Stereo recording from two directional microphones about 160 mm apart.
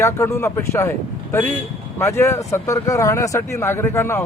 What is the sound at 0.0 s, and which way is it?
Speech, 15° left (ahead or behind).